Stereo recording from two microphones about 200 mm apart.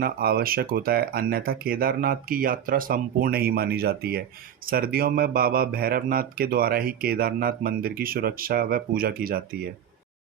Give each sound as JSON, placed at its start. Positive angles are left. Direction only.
{"t": 0.0, "sound": "speech", "side_deg": -50}